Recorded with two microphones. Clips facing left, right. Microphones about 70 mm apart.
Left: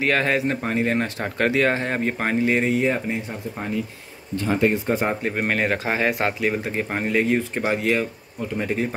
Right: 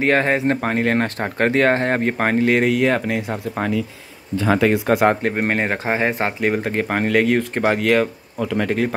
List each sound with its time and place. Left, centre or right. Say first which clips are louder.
0.0 s speech: right 4 dB; right
0.6 s speech: right 3 dB; right
4.5 s speech: right 4 dB; right
5.3 s speech: right 2 dB; right
6.4 s speech: right 4 dB; right